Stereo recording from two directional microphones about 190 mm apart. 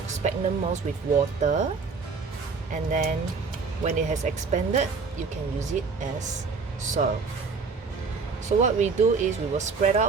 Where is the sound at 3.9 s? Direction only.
40° right (ahead or behind).